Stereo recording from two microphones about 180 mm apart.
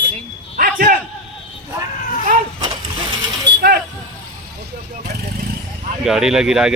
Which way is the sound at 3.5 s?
75° right (ahead or behind).